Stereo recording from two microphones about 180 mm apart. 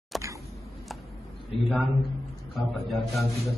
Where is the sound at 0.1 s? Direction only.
Centre (ahead or behind).